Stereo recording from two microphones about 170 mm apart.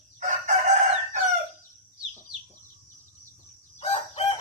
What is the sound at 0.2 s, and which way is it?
Chicken, 45° right (ahead or behind).